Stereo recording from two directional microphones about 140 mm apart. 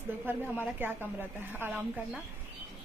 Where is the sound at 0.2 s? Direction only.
15° right (ahead or behind).